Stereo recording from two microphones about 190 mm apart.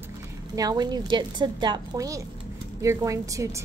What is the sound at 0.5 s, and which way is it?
A woman's voice, 20° right (ahead or behind).